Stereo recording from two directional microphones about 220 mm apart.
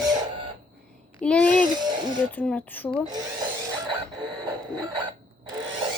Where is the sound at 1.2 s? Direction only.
5° left (ahead or behind).